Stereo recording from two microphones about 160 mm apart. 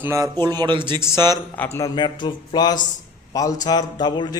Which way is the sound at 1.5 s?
15° left (ahead or behind).